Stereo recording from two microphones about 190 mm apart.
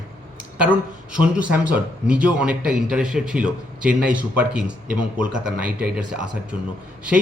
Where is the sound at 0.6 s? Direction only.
5° right (ahead or behind).